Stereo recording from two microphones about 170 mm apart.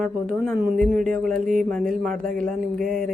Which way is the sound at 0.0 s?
Centre (ahead or behind).